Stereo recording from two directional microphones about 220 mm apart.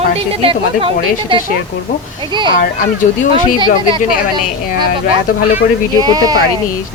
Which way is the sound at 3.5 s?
20° right (ahead or behind).